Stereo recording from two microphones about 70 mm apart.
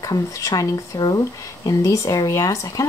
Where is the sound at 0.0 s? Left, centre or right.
Left.